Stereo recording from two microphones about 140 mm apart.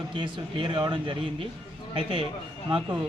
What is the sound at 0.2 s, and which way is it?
A man's voice, 35° right (ahead or behind).